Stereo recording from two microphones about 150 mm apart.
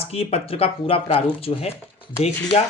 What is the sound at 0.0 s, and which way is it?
Speech, 40° left (ahead or behind).